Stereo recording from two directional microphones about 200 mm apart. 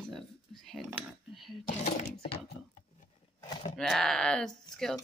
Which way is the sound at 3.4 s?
20° left (ahead or behind).